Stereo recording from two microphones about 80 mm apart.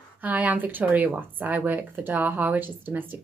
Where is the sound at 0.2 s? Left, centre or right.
Right.